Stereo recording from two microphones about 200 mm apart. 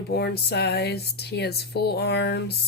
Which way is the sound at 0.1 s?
55° left (ahead or behind).